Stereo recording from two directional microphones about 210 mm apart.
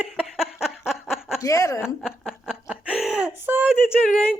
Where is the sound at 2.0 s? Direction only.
5° right (ahead or behind).